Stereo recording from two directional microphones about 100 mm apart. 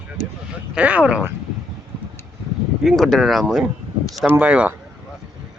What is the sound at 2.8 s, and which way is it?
Speech, centre (ahead or behind).